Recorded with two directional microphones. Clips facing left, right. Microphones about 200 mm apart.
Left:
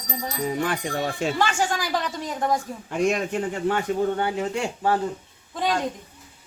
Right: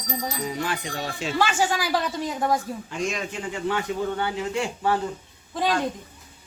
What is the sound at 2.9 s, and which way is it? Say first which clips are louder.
A man's voice: left 8 dB; 55° left (ahead or behind).